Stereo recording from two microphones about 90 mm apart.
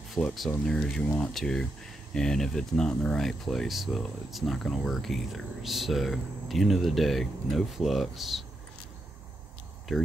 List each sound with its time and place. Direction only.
0.2 s speech: 25° left (ahead or behind)
0.7 s speech: 5° left (ahead or behind)
9.9 s speech: centre (ahead or behind)